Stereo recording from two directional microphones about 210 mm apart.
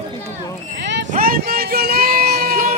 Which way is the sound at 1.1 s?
45° right (ahead or behind).